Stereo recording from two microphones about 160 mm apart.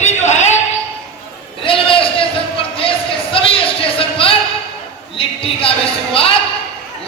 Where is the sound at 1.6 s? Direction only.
35° left (ahead or behind).